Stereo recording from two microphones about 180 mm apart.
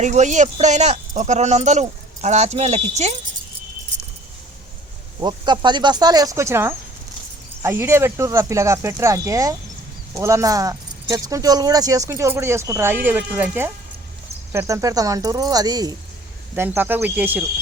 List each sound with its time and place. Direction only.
0.0 s speech: 40° right (ahead or behind)
5.2 s speech: 25° right (ahead or behind)
16.6 s speech: 10° right (ahead or behind)